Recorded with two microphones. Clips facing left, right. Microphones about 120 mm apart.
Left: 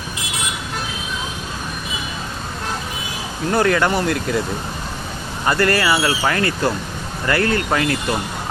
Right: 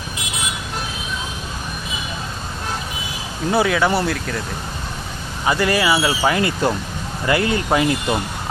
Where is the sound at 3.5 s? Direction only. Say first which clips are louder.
Even; 5° right (ahead or behind).